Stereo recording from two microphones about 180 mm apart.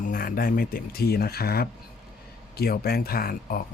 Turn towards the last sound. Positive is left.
turn(degrees=55)  # may be behind; listen again after turning